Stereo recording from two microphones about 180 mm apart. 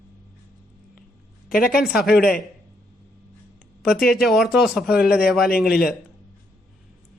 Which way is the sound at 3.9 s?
60° left (ahead or behind).